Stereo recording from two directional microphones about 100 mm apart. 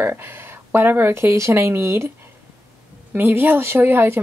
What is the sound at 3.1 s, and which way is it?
Speech, 20° right (ahead or behind).